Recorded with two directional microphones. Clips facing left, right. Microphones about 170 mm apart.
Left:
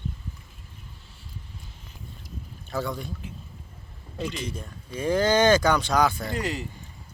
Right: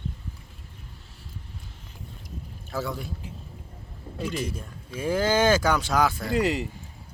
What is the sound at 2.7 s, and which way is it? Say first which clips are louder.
Speech: left 1 dB; 5° right (ahead or behind).